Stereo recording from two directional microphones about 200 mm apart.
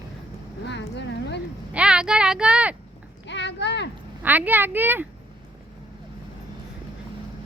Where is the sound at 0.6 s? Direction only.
60° left (ahead or behind).